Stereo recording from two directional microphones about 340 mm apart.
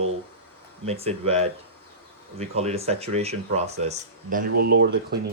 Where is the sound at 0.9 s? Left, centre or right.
Centre.